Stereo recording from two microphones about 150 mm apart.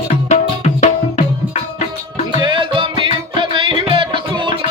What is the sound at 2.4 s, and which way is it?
Music, 35° right (ahead or behind).